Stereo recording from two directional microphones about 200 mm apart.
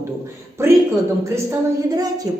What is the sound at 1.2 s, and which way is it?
Speech, 15° right (ahead or behind).